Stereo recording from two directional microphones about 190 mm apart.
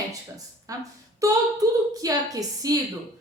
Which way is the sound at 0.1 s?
20° right (ahead or behind).